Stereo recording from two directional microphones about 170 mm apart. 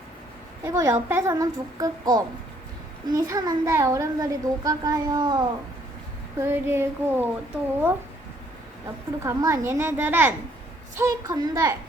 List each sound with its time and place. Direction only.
0.6 s a sound: 20° right (ahead or behind)
1.0 s a child's voice: 15° right (ahead or behind)
6.4 s speech: 15° right (ahead or behind)
9.2 s a child's voice: 15° right (ahead or behind)